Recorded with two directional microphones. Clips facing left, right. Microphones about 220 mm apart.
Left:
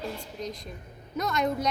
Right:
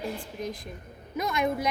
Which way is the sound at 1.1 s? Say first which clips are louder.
Even; 10° right (ahead or behind).